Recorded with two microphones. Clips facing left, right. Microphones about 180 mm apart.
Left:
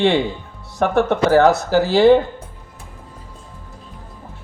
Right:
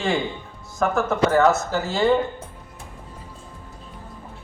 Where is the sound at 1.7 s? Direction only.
75° left (ahead or behind).